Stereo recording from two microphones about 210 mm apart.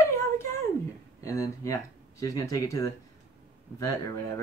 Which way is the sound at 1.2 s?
15° left (ahead or behind).